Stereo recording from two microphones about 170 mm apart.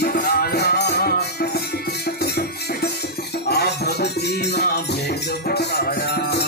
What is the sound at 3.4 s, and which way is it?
Music, 70° left (ahead or behind).